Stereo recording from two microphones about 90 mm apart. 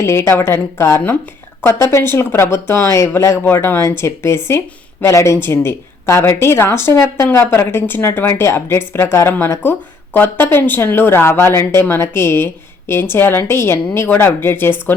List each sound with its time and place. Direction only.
0.0 s a woman's voice: 30° left (ahead or behind)